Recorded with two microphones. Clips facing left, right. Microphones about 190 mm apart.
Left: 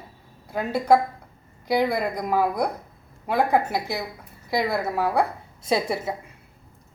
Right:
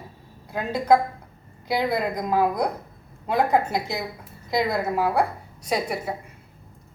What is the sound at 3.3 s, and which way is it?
A woman's voice, 20° right (ahead or behind).